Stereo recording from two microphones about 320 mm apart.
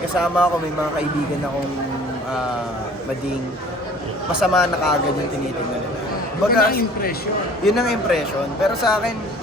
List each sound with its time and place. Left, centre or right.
0.2 s a man's voice: centre
4.4 s a man's voice: centre
6.5 s a man's voice: left
7.6 s a man's voice: centre